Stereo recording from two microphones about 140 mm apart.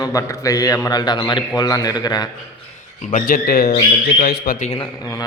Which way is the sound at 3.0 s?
65° left (ahead or behind).